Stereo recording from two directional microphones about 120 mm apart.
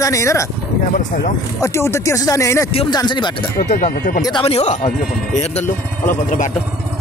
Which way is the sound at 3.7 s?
90° left.